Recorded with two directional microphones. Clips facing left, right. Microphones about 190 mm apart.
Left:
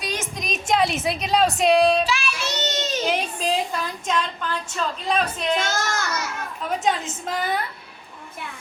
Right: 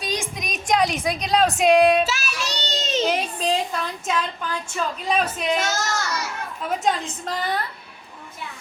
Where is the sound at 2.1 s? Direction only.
40° right (ahead or behind).